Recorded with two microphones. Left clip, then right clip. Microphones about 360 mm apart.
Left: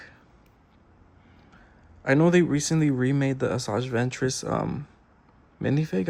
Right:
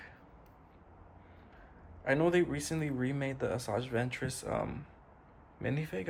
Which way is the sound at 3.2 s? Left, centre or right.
Centre.